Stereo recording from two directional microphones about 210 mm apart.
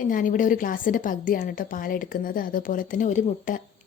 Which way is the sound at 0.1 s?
40° left (ahead or behind).